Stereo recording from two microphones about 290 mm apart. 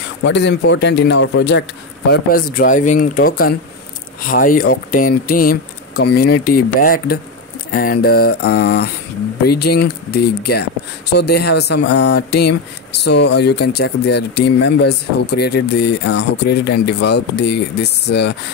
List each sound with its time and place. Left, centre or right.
0.2 s speech: left